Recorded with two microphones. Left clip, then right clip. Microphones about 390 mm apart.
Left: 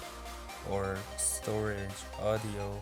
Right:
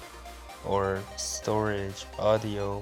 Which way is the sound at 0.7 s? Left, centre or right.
Left.